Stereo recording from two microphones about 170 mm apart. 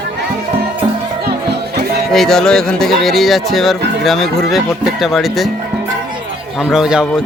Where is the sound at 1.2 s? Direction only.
70° right (ahead or behind).